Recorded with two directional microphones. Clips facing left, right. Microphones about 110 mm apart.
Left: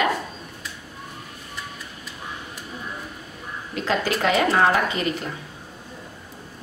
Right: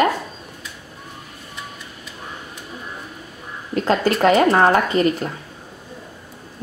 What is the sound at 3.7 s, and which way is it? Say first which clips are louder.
Speech: right 6 dB; 40° right (ahead or behind).